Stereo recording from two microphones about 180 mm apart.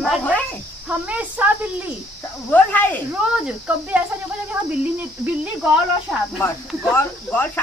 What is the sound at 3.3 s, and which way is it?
Speech, 5° right (ahead or behind).